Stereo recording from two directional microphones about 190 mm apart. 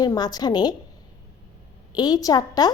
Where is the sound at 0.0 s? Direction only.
20° left (ahead or behind).